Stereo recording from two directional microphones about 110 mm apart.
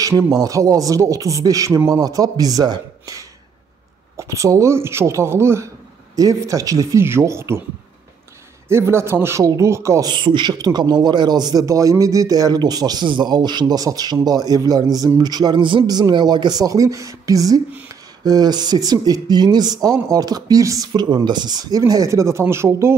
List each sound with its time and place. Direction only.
0.3 s speech: 30° right (ahead or behind)
8.6 s speech: 25° right (ahead or behind)
10.0 s speech: 45° right (ahead or behind); by 22.9 s 25° right (ahead or behind)